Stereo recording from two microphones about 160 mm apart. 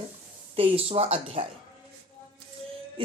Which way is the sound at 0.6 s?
35° right (ahead or behind).